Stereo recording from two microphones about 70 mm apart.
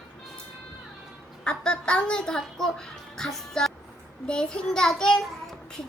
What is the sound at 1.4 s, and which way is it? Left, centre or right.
A child's voice, centre.